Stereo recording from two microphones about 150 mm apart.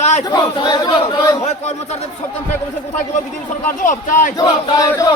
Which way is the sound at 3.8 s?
60° left (ahead or behind).